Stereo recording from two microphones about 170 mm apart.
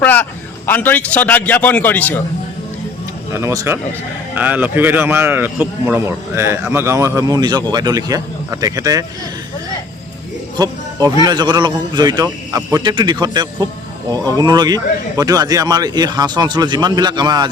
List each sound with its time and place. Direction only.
0.0 s a man's voice: 10° left (ahead or behind)
3.3 s a man's voice: 20° right (ahead or behind)
11.2 s a man's voice: 25° right (ahead or behind)